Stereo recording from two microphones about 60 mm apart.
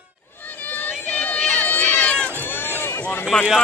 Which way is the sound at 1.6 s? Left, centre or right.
Left.